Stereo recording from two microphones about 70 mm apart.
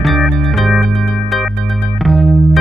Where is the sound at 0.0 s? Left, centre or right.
Centre.